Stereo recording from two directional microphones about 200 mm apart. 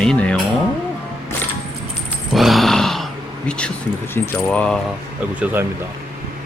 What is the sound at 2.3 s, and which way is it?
Grunt, centre (ahead or behind).